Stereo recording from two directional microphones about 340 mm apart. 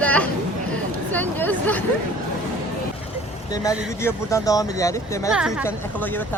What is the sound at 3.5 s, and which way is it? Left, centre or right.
Speech, centre.